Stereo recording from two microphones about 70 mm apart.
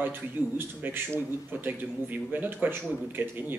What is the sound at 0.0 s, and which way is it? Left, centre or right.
A man's voice, right.